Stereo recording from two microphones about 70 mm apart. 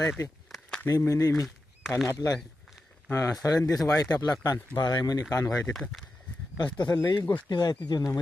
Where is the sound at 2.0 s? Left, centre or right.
Left.